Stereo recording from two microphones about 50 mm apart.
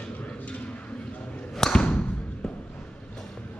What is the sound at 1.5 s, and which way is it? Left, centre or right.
Basketball bounce, centre.